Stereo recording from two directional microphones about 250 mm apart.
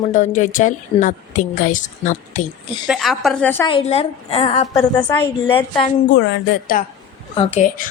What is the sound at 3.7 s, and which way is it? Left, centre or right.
A woman's voice, left.